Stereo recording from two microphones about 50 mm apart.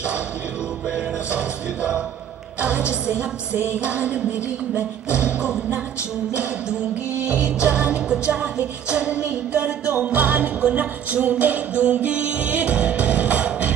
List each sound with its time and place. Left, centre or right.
0.9 s music: right
5.2 s music: right
7.4 s music: right